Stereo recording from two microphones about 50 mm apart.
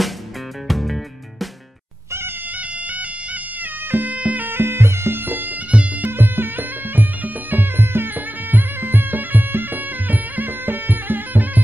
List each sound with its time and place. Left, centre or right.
0.7 s music: centre
3.9 s bagpipes: right
5.7 s music: right
6.0 s music: right